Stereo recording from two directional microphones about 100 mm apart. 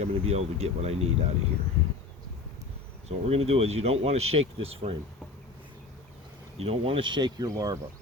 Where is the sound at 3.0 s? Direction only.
85° right.